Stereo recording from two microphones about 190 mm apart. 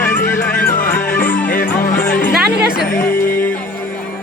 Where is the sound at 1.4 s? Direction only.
45° left (ahead or behind).